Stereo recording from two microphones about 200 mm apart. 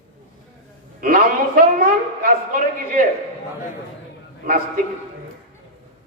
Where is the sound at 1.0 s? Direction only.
45° right (ahead or behind).